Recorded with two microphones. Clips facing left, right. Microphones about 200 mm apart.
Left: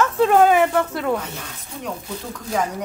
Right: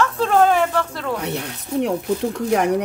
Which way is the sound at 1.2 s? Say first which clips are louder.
Right 8 dB; 70° right (ahead or behind).